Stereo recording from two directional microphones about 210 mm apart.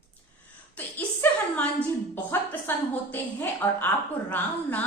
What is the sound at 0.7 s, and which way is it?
A woman's voice, 5° left (ahead or behind).